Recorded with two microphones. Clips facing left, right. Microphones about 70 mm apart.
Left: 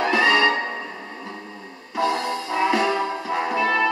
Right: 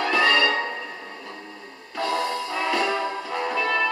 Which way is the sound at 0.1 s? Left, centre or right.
Centre.